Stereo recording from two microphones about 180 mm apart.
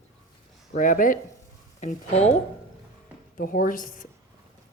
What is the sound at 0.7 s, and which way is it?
Speech, 50° left (ahead or behind).